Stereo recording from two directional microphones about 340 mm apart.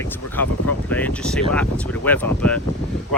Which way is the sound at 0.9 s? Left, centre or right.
Centre.